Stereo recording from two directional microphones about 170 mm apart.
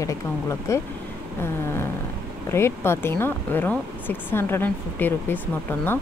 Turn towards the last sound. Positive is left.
turn(degrees=10)  # may be behind; listen again after turning